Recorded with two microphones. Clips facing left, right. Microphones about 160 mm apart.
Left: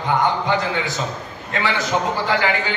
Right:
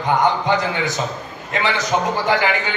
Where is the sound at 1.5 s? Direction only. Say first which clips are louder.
Right 1 dB; 20° right (ahead or behind).